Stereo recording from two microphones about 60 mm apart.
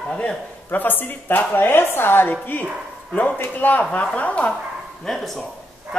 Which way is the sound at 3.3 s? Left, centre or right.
Left.